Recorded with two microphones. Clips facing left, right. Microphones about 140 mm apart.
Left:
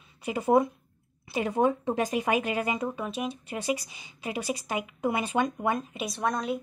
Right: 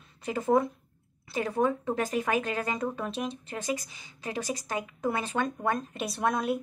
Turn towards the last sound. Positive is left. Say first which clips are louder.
# right 1 dB
turn(degrees=-5)  # may be behind; listen again after turning